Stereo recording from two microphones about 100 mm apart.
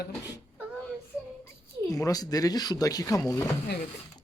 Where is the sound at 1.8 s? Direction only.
35° left (ahead or behind).